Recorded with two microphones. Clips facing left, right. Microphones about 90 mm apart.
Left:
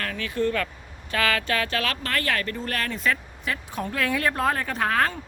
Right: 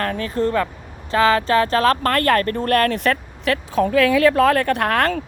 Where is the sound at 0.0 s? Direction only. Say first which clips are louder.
Right 5 dB; 40° right (ahead or behind).